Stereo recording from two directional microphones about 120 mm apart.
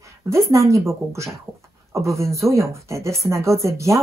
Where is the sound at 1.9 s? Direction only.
25° right (ahead or behind).